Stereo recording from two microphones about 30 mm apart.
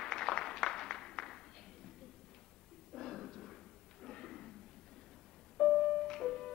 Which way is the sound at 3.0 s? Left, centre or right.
Centre.